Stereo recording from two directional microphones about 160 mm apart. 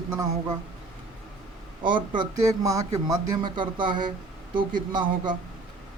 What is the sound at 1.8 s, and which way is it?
Speech, 30° right (ahead or behind).